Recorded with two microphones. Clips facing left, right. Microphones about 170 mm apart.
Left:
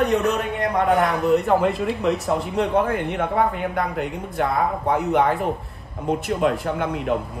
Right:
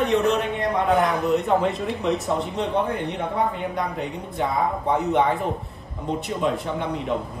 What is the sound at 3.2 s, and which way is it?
Speech, 65° left (ahead or behind).